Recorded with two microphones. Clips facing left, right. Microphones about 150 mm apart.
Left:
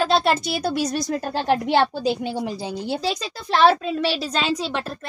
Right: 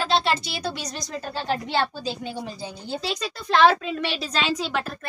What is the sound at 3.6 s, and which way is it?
Speech, 35° left (ahead or behind).